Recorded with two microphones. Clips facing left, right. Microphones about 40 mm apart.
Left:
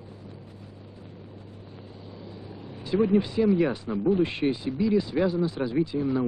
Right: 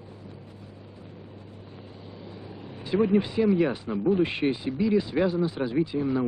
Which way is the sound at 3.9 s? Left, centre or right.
Centre.